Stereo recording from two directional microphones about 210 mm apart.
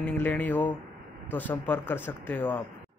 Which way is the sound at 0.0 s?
10° left (ahead or behind).